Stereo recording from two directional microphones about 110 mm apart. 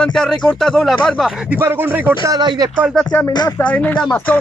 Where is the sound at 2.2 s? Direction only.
35° right (ahead or behind).